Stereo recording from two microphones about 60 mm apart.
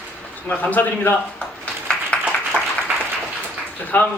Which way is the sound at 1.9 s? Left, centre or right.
Centre.